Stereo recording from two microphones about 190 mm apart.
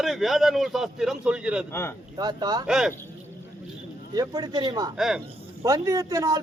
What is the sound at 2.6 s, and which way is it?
Speech, 5° right (ahead or behind).